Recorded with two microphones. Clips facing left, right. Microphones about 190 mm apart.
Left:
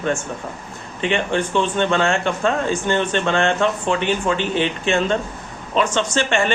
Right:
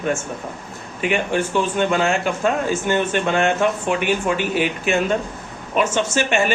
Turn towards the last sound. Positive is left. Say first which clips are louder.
# even
turn(degrees=-10)  # may be behind; listen again after turning